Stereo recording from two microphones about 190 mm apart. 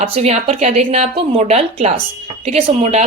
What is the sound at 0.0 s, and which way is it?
A woman's voice, 35° right (ahead or behind).